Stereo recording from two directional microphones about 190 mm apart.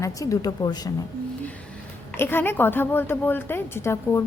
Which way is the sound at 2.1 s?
10° left (ahead or behind).